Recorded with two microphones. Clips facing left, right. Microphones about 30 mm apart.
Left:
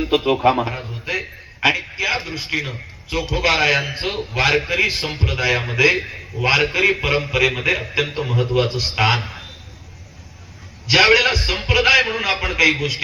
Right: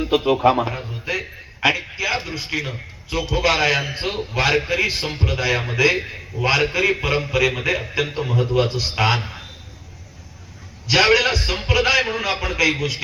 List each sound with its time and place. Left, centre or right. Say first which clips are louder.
0.0 s a man's voice: even; left; by 1.1 s centre
1.1 s a sound: left 2 dB; centre
2.0 s a man's voice: left 2 dB; centre
6.0 s a man's voice: left 1 dB; centre
6.5 s a man's voice: left 2 dB; left
10.8 s a man's voice: left 2 dB; left